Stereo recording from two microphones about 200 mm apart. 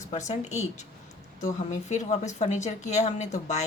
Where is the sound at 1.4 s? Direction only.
40° left (ahead or behind).